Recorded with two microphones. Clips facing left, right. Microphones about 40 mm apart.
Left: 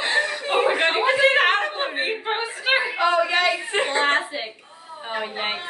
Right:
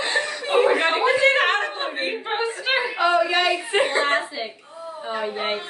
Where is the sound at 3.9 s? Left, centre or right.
Left.